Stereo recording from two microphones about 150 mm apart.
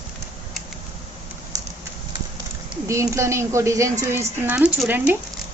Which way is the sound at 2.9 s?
20° right (ahead or behind).